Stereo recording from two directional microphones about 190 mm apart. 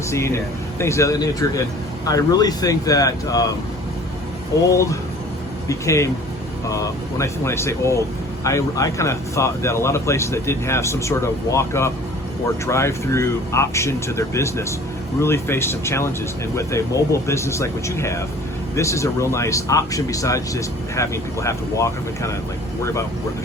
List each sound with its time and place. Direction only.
0.1 s speech: 15° left (ahead or behind)
4.6 s speech: 15° left (ahead or behind)